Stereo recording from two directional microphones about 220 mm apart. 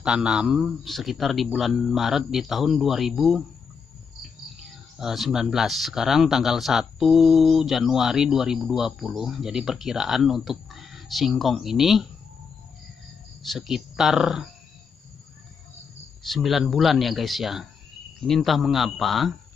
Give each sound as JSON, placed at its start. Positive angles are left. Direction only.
{"t": 0.0, "sound": "speech", "side_deg": -5}
{"t": 4.9, "sound": "speech", "side_deg": 0}
{"t": 13.5, "sound": "speech", "side_deg": 0}
{"t": 16.3, "sound": "speech", "side_deg": 0}